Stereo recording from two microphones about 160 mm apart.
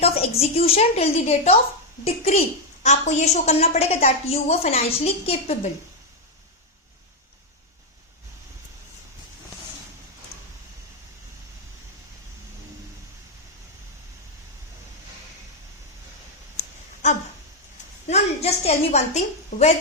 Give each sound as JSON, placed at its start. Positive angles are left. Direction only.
{"t": 0.0, "sound": "a woman's voice", "side_deg": 40}
{"t": 18.1, "sound": "a woman's voice", "side_deg": 40}